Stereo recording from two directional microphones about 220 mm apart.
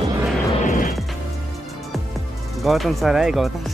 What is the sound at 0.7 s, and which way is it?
Music, 40° left (ahead or behind).